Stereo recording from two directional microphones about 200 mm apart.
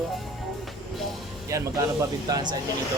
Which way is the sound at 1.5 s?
15° right (ahead or behind).